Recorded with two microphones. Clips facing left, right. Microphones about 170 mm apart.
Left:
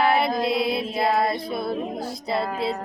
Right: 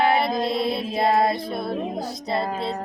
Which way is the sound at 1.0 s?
25° right (ahead or behind).